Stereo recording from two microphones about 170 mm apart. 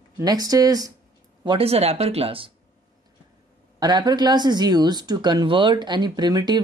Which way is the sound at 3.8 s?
25° right (ahead or behind).